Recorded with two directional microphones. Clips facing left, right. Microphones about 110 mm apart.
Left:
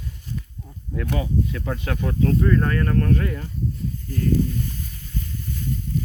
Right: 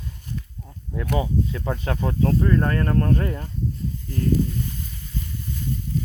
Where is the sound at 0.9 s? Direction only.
20° right (ahead or behind).